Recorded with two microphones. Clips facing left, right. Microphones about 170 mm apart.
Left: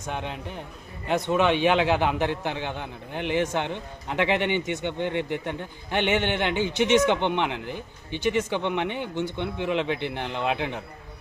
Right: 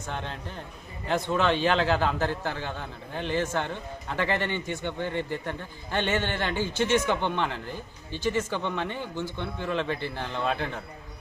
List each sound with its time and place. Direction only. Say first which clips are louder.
0.1 s a man's voice: left 3 dB; 15° left (ahead or behind)
6.8 s speech: left 5 dB; 75° left (ahead or behind)
7.1 s a man's voice: left 3 dB; 20° left (ahead or behind)